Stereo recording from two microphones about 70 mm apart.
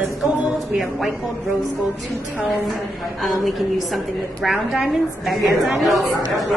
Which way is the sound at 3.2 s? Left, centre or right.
Centre.